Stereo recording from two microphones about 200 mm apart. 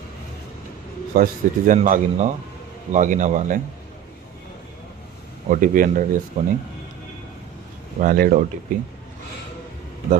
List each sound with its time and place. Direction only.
1.1 s speech: 45° right (ahead or behind)
5.5 s speech: 40° right (ahead or behind)
8.0 s speech: 45° right (ahead or behind)